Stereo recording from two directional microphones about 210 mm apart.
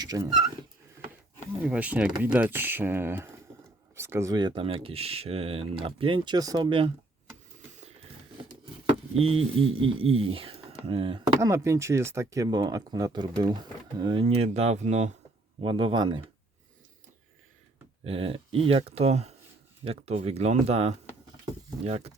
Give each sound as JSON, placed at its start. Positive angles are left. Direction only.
{"t": 0.0, "sound": "speech", "side_deg": -20}
{"t": 1.6, "sound": "speech", "side_deg": -5}
{"t": 9.2, "sound": "speech", "side_deg": -25}
{"t": 11.3, "sound": "speech", "side_deg": -15}
{"t": 18.0, "sound": "speech", "side_deg": -25}